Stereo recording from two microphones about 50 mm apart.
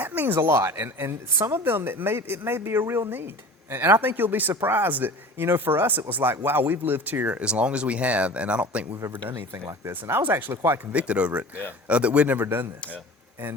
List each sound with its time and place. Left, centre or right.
0.0 s a sound: right
0.3 s speech: right
3.1 s speech: right
9.0 s speech: right
9.9 s speech: right
10.9 s speech: right
12.4 s speech: right